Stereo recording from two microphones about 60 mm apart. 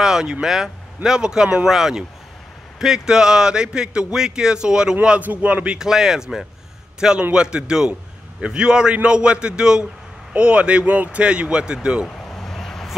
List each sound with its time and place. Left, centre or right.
0.0 s speech: centre
5.2 s speech: right
5.8 s speech: centre
12.4 s a sound: centre